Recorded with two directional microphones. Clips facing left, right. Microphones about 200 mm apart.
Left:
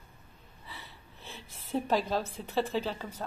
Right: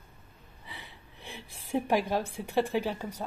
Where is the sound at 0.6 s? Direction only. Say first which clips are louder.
Right 1 dB; 15° right (ahead or behind).